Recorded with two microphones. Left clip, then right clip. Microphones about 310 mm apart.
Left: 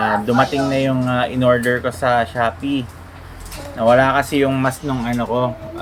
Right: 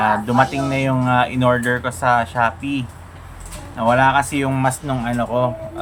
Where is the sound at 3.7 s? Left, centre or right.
Right.